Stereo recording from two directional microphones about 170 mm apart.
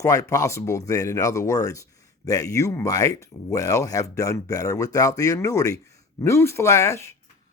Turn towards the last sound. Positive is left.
turn(degrees=15)  # may be behind; listen again after turning